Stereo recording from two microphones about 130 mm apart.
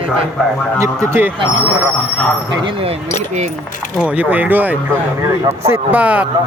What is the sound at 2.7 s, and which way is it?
Speech, 45° right (ahead or behind).